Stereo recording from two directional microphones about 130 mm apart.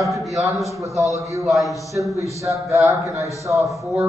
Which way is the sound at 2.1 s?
25° right (ahead or behind).